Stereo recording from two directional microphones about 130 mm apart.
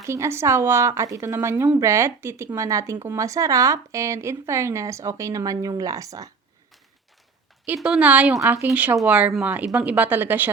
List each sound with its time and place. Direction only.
0.1 s a woman's voice: 20° right (ahead or behind)
7.8 s a woman's voice: 10° right (ahead or behind)